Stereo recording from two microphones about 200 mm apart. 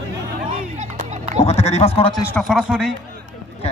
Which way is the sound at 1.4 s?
30° left (ahead or behind).